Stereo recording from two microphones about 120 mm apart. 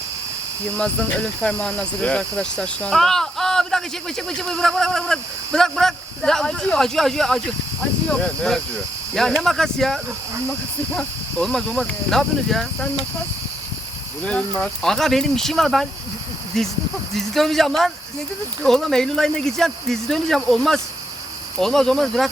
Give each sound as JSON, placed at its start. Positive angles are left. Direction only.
{"t": 1.4, "sound": "speech", "side_deg": 5}
{"t": 14.3, "sound": "speech", "side_deg": 10}